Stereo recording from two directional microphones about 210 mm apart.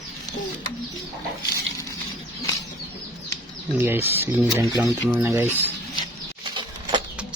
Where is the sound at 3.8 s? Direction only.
10° right (ahead or behind).